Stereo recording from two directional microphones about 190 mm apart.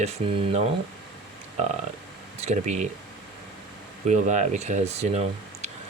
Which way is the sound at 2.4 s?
35° right (ahead or behind).